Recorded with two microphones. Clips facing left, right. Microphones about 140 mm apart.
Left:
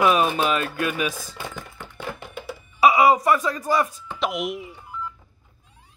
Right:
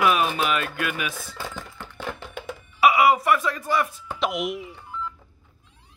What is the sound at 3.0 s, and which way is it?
Speech, 35° left (ahead or behind).